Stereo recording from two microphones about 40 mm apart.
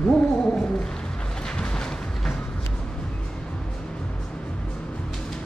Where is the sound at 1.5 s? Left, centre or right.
Left.